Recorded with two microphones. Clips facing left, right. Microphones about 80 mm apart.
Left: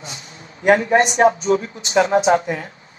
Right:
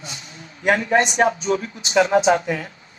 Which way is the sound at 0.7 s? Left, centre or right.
Left.